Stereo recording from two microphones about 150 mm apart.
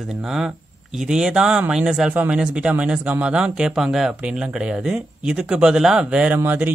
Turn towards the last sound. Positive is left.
turn(degrees=-10)  # may be behind; listen again after turning